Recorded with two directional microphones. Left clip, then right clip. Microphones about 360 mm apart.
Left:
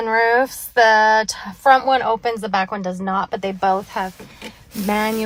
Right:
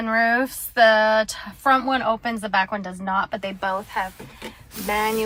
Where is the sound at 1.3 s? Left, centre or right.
Centre.